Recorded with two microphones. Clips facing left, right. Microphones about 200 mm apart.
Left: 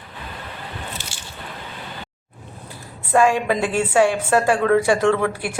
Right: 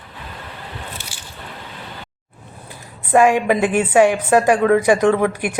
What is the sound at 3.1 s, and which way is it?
A woman's voice, 15° right (ahead or behind).